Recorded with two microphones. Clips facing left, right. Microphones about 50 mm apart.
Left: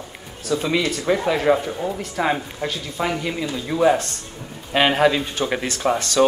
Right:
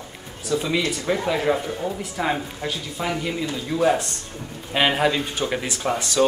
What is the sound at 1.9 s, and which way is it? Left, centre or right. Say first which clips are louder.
Speech: left 2 dB; centre.